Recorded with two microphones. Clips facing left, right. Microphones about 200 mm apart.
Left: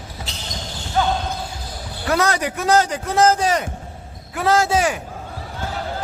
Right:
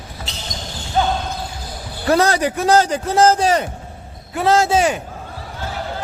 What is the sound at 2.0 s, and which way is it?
A man's voice, 30° right (ahead or behind).